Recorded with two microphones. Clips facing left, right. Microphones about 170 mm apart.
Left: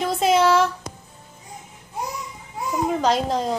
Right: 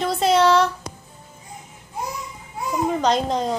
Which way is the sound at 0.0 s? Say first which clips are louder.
Right 1 dB; 5° left (ahead or behind).